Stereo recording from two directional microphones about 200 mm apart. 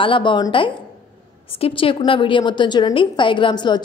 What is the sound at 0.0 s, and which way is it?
A woman's voice, 25° left (ahead or behind).